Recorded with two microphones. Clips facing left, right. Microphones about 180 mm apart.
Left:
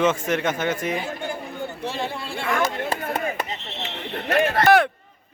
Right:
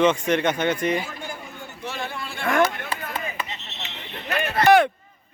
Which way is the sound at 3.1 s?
45° left (ahead or behind).